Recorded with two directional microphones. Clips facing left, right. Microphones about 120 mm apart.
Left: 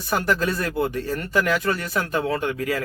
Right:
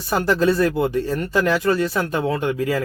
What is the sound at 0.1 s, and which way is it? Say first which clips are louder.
Speech: right 5 dB; 25° right (ahead or behind).